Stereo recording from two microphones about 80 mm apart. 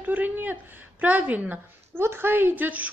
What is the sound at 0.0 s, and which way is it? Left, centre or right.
A woman's voice, right.